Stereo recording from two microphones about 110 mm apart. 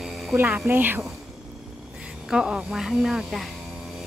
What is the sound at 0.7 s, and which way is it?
Speech, 20° right (ahead or behind).